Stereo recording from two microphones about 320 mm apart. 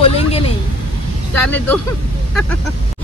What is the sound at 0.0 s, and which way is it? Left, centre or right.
Vehicle, centre.